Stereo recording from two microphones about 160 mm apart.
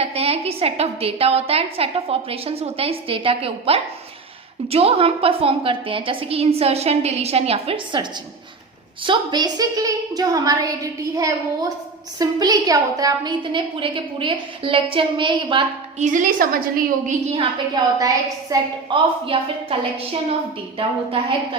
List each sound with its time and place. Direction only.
0.0 s a woman's voice: 40° right (ahead or behind)
9.0 s a woman's voice: 25° right (ahead or behind)
16.0 s a woman's voice: 50° right (ahead or behind)
17.8 s a woman's voice: 25° right (ahead or behind)
18.9 s a woman's voice: 35° right (ahead or behind)
20.7 s a woman's voice: 35° right (ahead or behind)